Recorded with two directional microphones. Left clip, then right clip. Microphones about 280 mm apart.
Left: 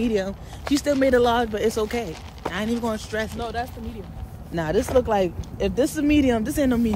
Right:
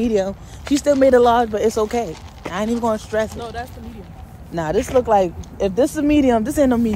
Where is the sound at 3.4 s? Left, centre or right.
Centre.